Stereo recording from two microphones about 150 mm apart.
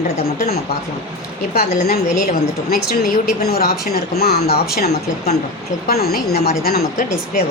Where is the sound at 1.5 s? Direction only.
90° left.